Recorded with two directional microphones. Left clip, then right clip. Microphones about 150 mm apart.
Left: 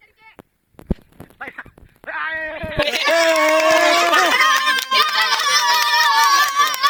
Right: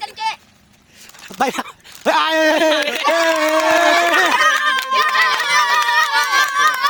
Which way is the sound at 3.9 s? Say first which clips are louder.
Right 1 dB; centre (ahead or behind).